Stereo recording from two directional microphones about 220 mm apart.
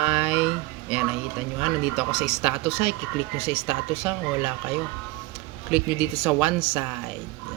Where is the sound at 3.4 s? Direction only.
25° left (ahead or behind).